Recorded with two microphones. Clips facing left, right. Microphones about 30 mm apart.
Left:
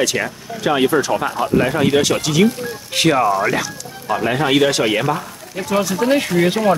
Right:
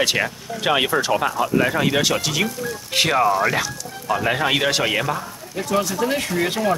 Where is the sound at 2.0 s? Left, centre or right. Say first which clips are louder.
Left 5 dB; centre.